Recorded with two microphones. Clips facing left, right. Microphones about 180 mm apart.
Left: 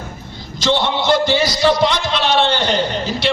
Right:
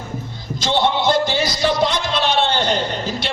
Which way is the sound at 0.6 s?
50° right (ahead or behind).